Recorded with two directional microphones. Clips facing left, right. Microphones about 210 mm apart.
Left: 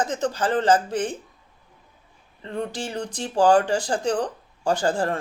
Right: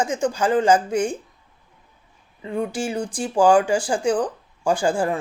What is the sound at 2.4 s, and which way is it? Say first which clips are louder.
Speech: right 4 dB; 10° right (ahead or behind).